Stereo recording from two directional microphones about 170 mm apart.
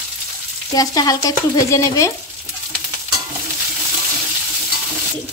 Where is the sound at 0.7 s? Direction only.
20° left (ahead or behind).